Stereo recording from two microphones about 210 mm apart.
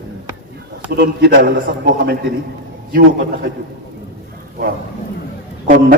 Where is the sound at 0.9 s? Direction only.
50° right (ahead or behind).